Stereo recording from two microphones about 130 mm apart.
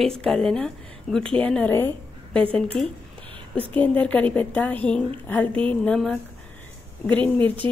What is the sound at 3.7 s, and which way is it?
A woman's voice, 10° left (ahead or behind).